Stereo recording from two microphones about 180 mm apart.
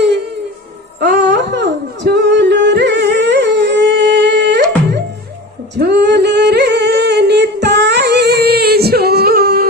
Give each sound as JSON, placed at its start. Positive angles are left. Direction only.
{"t": 0.9, "sound": "music", "side_deg": -70}
{"t": 5.7, "sound": "singing", "side_deg": -70}